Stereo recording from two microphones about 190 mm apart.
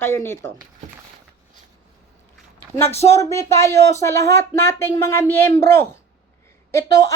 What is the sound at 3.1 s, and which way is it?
A woman's voice, 15° left (ahead or behind).